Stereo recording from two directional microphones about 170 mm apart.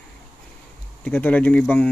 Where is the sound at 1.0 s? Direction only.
10° left (ahead or behind).